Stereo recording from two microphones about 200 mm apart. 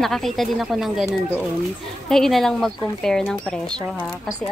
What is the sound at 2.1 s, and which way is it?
A woman's voice, centre (ahead or behind).